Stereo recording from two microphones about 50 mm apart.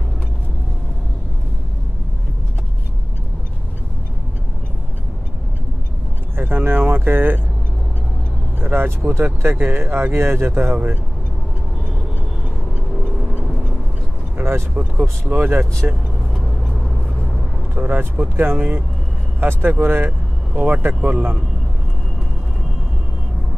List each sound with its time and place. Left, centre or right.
6.3 s speech: right
8.5 s vehicle: right
9.1 s speech: right
14.4 s vehicle: right
14.8 s speech: right
15.8 s speech: right
17.8 s speech: right
18.6 s speech: right
19.4 s speech: right
20.1 s vehicle: right
20.8 s speech: right